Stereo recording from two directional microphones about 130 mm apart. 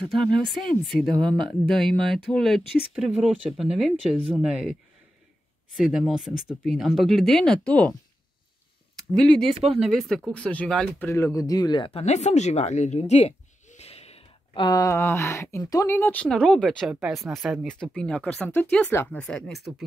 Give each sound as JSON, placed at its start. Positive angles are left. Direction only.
{"t": 0.0, "sound": "speech", "side_deg": 0}
{"t": 5.8, "sound": "speech", "side_deg": -5}
{"t": 9.8, "sound": "speech", "side_deg": 0}
{"t": 11.1, "sound": "speech", "side_deg": 20}
{"t": 12.0, "sound": "a sound", "side_deg": 60}
{"t": 14.6, "sound": "speech", "side_deg": 30}
{"t": 14.9, "sound": "speech", "side_deg": 20}
{"t": 16.0, "sound": "speech", "side_deg": 10}